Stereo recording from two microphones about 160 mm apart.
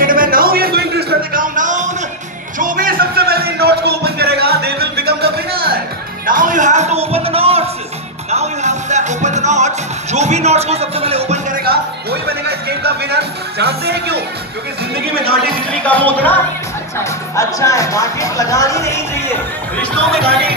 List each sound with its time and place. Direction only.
0.0 s a sound: 60° right (ahead or behind)
2.6 s music: 60° right (ahead or behind); by 5.8 s 75° right (ahead or behind)
6.2 s music: 55° right (ahead or behind); by 11.4 s 40° right (ahead or behind)
11.6 s speech: 85° right
15.7 s music: 10° left (ahead or behind)
17.0 s speech: 20° left (ahead or behind)